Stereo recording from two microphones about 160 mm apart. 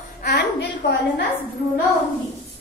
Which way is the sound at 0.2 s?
85° left.